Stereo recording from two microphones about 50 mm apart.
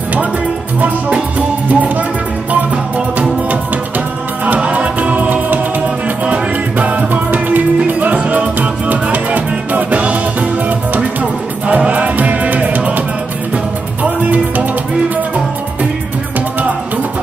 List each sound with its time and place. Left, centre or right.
0.7 s music: right
4.6 s music: right
11.6 s music: right
14.0 s music: right